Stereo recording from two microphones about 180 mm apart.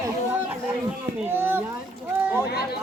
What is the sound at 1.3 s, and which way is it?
Speech, 10° right (ahead or behind).